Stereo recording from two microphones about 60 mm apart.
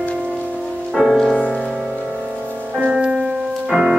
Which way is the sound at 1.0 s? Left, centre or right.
Centre.